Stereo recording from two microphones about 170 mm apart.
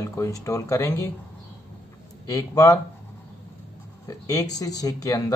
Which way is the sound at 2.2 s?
20° left (ahead or behind).